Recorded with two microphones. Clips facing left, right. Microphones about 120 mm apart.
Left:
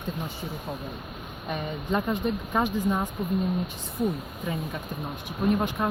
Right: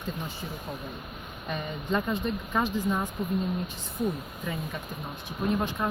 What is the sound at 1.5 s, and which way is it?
Speech, 15° left (ahead or behind).